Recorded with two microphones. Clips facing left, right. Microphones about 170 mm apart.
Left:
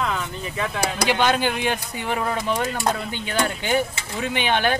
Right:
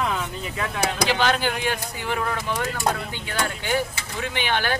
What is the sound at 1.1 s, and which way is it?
Speech, 20° left (ahead or behind).